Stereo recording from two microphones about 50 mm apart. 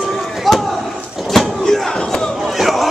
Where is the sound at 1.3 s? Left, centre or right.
Centre.